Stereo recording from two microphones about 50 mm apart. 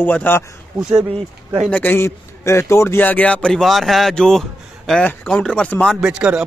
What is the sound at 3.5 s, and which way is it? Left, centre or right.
Speech, centre.